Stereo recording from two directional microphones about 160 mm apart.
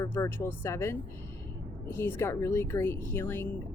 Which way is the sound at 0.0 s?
15° left (ahead or behind).